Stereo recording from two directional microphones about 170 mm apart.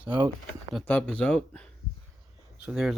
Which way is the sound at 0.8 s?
5° left (ahead or behind).